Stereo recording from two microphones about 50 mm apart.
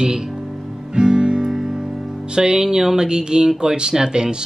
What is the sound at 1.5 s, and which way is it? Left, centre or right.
Speech, centre.